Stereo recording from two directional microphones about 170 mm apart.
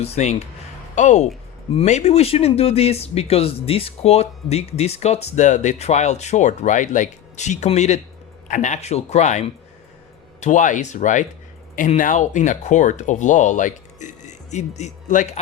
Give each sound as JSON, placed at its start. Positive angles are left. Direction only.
{"t": 0.0, "sound": "speech", "side_deg": 40}